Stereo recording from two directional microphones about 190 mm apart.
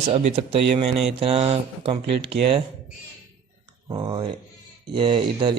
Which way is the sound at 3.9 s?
25° right (ahead or behind).